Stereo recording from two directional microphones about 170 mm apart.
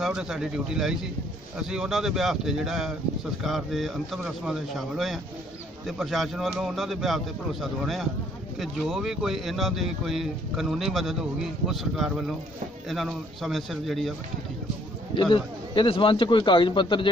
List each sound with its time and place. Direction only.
0.0 s speech: 5° right (ahead or behind)
15.3 s a man's voice: 30° left (ahead or behind)